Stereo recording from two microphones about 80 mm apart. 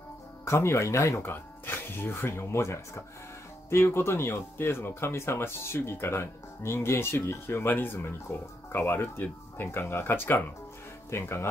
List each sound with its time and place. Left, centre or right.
0.5 s speech: left
1.3 s speech: left